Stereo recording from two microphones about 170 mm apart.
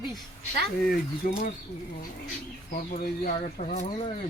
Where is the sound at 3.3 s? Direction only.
40° left (ahead or behind).